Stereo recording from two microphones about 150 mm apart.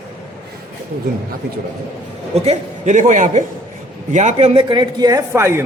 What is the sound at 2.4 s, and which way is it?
A man's voice, 55° right (ahead or behind).